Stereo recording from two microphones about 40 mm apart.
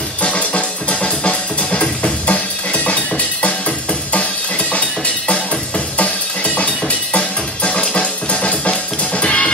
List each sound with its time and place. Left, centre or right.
0.2 s music: left